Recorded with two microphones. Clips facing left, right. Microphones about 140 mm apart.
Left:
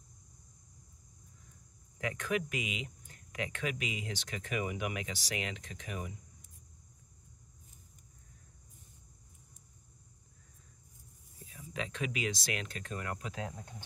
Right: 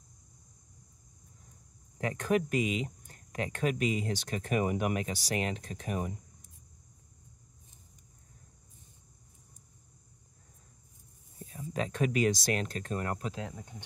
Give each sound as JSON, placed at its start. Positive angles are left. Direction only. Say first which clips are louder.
{"t": 2.0, "sound": "speech", "louder": "right 5 dB", "side_deg": -35}
{"t": 11.4, "sound": "speech", "louder": "right 6 dB", "side_deg": -40}